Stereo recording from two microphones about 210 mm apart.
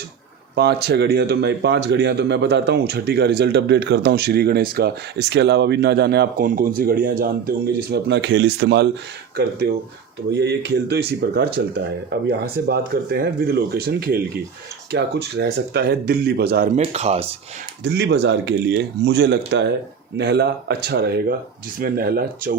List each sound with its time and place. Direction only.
0.5 s speech: 50° right (ahead or behind)
16.7 s speech: 30° right (ahead or behind)
17.8 s speech: 55° right (ahead or behind)